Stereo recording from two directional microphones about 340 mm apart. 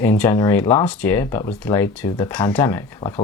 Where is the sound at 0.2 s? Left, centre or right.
Centre.